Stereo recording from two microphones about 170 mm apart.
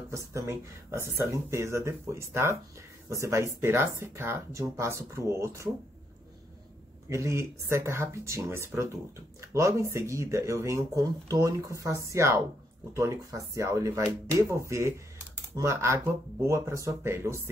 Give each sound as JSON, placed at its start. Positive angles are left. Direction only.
{"t": 0.1, "sound": "speech", "side_deg": -15}
{"t": 7.1, "sound": "speech", "side_deg": -15}